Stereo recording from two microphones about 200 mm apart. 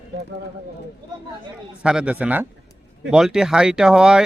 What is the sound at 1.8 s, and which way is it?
Speech, 5° right (ahead or behind).